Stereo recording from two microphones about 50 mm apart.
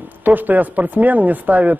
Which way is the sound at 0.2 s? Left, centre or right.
Right.